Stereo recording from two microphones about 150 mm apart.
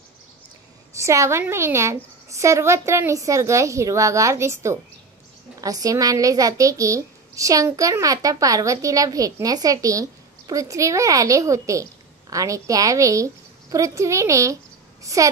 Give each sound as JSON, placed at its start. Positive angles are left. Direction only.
{"t": 0.9, "sound": "a child's voice", "side_deg": -20}